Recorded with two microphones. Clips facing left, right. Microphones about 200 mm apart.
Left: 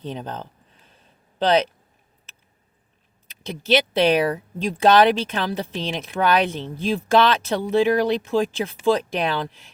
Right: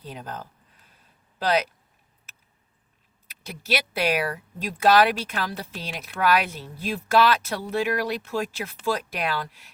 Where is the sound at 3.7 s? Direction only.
30° left (ahead or behind).